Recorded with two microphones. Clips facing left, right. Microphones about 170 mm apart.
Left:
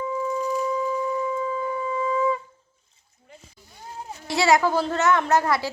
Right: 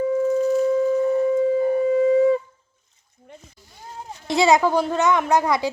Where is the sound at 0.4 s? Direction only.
55° right (ahead or behind).